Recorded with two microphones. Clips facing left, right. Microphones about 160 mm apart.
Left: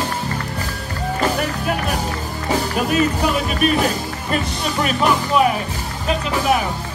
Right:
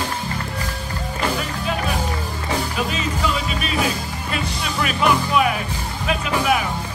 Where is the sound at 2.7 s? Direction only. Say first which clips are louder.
Left 6 dB; 50° left (ahead or behind); by 6.6 s 35° left (ahead or behind).